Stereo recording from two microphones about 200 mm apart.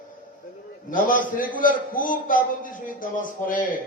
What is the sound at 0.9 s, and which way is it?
A man's voice, 40° left (ahead or behind).